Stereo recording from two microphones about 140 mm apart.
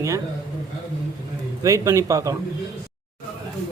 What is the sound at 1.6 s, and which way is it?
Speech, 25° right (ahead or behind).